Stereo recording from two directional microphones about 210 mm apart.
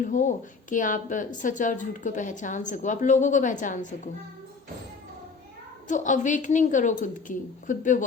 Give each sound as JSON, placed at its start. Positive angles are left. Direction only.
{"t": 0.0, "sound": "a woman's voice", "side_deg": 35}
{"t": 5.9, "sound": "a woman's voice", "side_deg": 35}